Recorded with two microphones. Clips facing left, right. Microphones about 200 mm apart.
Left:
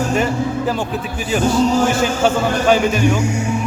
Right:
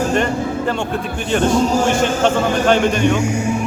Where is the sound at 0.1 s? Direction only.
5° left (ahead or behind).